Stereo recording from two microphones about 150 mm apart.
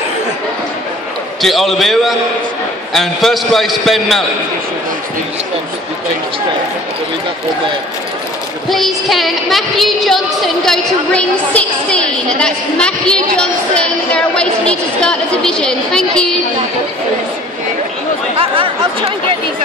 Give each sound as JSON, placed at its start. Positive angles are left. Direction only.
{"t": 1.4, "sound": "a woman's voice", "side_deg": 0}
{"t": 8.6, "sound": "a woman's voice", "side_deg": 0}
{"t": 18.4, "sound": "speech", "side_deg": -40}